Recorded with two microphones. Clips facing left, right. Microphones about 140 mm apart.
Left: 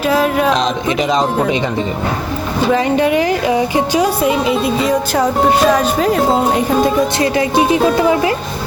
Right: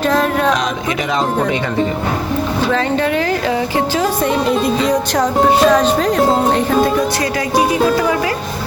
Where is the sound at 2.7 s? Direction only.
15° left (ahead or behind).